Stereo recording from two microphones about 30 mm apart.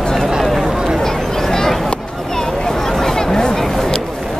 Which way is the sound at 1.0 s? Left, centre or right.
Centre.